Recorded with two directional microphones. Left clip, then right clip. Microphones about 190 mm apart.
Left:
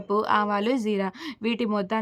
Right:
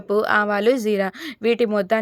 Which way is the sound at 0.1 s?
20° right (ahead or behind).